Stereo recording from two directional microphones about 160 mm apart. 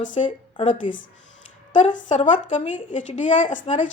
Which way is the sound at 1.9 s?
50° left (ahead or behind).